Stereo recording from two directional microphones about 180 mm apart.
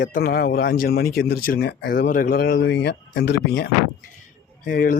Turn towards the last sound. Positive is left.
turn(degrees=50)  # may be behind; listen again after turning